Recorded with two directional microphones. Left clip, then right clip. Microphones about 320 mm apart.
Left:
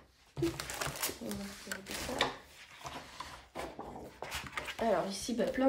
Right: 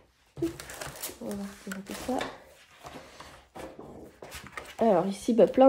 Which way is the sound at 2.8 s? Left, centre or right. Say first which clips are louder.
Even; centre.